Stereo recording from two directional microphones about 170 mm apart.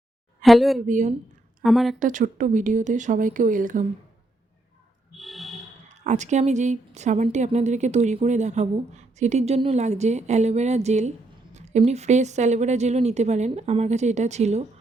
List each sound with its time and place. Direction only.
0.4 s a woman's voice: centre (ahead or behind)
0.9 s speech: 45° right (ahead or behind)
1.6 s a woman's voice: centre (ahead or behind)
2.0 s speech: 50° right (ahead or behind)
5.1 s a sound: centre (ahead or behind)
5.9 s a woman's voice: 45° right (ahead or behind)